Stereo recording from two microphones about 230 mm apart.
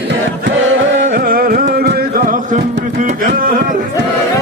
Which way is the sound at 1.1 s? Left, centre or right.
Right.